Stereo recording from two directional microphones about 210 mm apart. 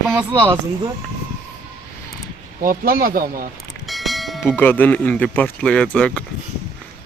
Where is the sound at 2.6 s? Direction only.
40° right (ahead or behind).